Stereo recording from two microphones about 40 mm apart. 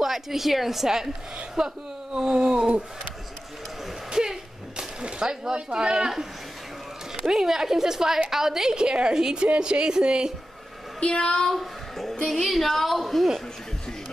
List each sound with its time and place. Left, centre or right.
0.0 s a woman's voice: centre
2.1 s a sound: centre
4.1 s a sound: centre
7.2 s a woman's voice: centre
11.1 s speech: centre
11.5 s a child's voice: centre